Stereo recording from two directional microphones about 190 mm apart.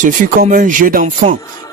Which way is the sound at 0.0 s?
45° right (ahead or behind).